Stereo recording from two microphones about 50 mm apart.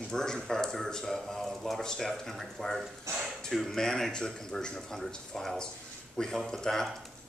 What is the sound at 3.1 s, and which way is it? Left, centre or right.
Speech, right.